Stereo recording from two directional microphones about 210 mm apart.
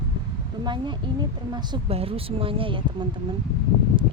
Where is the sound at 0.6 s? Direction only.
20° right (ahead or behind).